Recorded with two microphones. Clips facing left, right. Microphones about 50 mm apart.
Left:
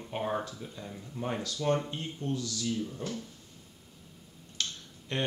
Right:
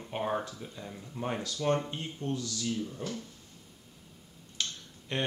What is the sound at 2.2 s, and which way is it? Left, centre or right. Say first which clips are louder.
Speech: even; right.